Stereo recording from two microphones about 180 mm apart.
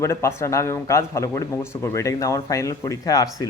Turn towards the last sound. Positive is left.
turn(degrees=20)  # may be behind; listen again after turning